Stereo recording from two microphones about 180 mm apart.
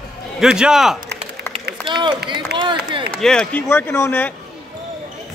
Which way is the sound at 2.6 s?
25° right (ahead or behind).